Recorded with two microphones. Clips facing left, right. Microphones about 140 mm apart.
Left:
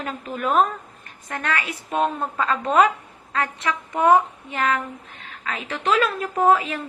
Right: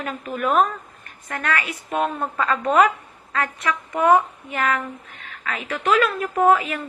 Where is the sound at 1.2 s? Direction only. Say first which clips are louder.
Right 1 dB; 20° left (ahead or behind).